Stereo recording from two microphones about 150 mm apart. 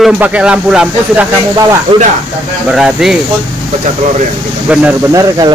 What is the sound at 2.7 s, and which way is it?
Speech, 5° right (ahead or behind).